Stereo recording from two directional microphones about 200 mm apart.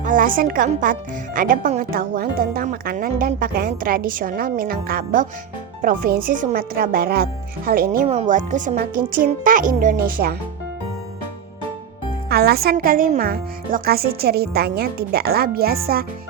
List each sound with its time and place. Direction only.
0.0 s speech: 40° right (ahead or behind)
8.0 s speech: 30° right (ahead or behind); by 10.3 s 50° right (ahead or behind)
12.3 s speech: 50° right (ahead or behind)